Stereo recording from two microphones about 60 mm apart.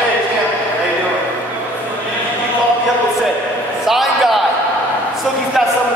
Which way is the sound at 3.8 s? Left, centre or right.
Centre.